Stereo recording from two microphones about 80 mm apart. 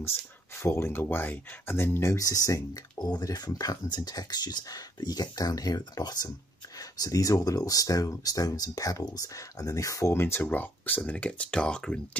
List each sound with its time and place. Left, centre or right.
0.6 s speech: left; by 12.2 s centre